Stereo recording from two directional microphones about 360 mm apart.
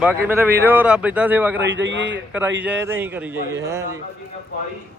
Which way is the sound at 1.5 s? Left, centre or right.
Right.